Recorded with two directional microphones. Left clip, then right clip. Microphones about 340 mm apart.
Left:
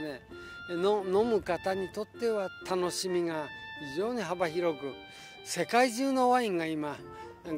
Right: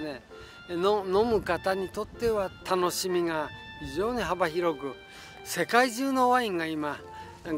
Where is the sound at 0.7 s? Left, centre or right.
Left.